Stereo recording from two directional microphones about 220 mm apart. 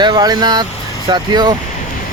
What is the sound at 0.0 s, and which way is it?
Speech, 20° right (ahead or behind).